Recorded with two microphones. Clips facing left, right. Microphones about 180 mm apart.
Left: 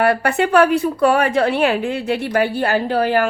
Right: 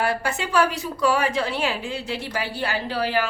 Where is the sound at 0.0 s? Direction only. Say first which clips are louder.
Left 8 dB; 60° left (ahead or behind).